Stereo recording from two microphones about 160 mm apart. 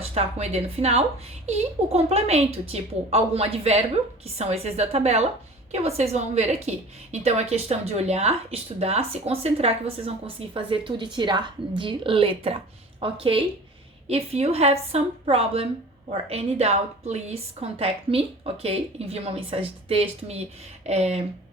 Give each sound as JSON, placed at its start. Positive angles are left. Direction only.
{"t": 0.0, "sound": "a woman's voice", "side_deg": -40}